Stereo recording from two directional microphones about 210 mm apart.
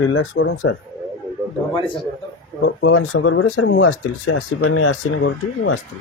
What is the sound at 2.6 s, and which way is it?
Speech, 80° left.